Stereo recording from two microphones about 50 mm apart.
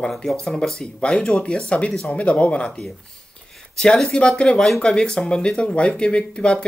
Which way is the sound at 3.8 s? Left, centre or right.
Centre.